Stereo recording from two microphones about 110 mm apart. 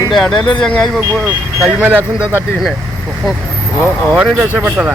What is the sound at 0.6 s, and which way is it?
Speech, 5° left (ahead or behind).